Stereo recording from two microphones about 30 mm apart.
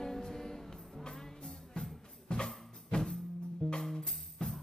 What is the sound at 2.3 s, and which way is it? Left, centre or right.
Music, left.